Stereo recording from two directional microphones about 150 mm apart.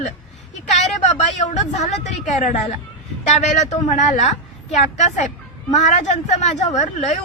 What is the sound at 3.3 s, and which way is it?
A woman's voice, 50° left (ahead or behind).